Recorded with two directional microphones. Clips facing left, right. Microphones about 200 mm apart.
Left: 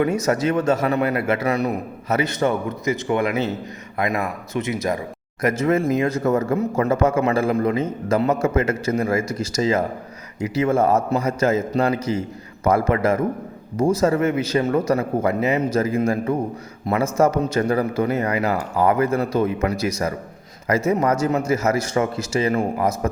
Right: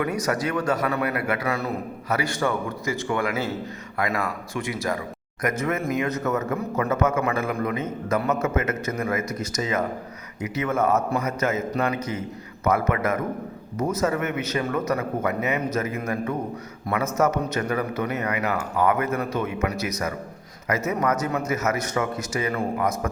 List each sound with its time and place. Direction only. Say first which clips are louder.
0.0 s speech: left 5 dB; 25° left (ahead or behind)